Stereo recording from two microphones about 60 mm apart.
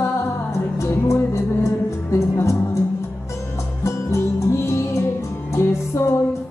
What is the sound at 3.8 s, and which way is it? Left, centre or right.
Music, left.